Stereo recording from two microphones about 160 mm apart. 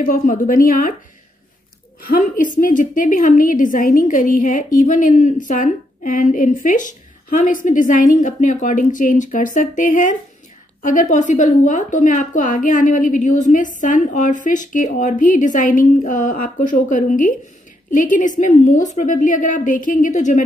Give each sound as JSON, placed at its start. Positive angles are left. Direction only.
{"t": 0.0, "sound": "a woman's voice", "side_deg": 60}
{"t": 2.0, "sound": "a woman's voice", "side_deg": 60}